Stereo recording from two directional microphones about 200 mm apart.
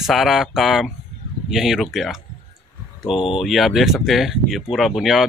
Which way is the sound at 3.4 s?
Centre (ahead or behind).